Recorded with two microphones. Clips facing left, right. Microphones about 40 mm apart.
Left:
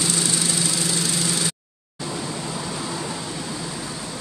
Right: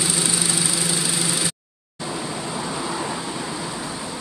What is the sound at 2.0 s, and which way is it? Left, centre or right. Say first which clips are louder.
Vehicle: right 1 dB; centre.